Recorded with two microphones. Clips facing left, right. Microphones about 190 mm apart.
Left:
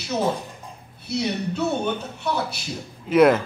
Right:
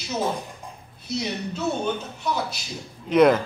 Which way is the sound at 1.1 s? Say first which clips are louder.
Left 3 dB; 60° left (ahead or behind).